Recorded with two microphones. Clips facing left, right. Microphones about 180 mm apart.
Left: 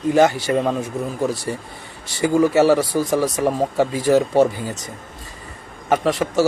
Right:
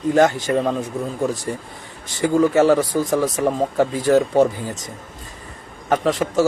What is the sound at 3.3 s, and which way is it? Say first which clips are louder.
Speech: even; 10° left (ahead or behind).